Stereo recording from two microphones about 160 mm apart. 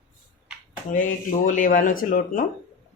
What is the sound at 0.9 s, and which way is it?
Speech, 55° left (ahead or behind).